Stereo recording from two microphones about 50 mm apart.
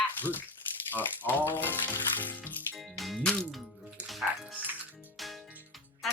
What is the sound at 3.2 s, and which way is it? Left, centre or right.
Speech, centre.